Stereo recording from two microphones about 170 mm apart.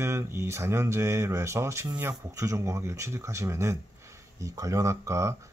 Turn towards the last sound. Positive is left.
turn(degrees=-15)  # may be behind; listen again after turning